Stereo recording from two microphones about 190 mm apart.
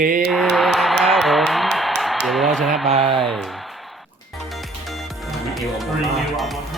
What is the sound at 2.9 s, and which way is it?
Speech, 30° right (ahead or behind).